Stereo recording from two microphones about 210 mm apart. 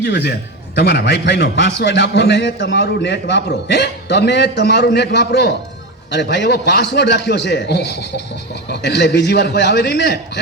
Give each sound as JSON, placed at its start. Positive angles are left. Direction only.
{"t": 0.0, "sound": "a man's voice", "side_deg": 50}